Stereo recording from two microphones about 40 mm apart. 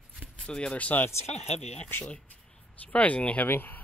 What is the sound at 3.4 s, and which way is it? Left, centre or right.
Speech, left.